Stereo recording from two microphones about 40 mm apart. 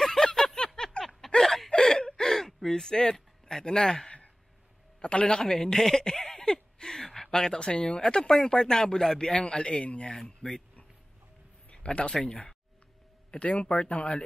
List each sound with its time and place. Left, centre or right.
0.0 s a sound: centre
1.0 s a sound: left
1.7 s gasp: centre
2.7 s a man's voice: centre
11.7 s speech: left
13.3 s speech: left